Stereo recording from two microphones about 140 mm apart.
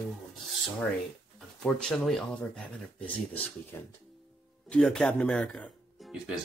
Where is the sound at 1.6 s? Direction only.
5° left (ahead or behind).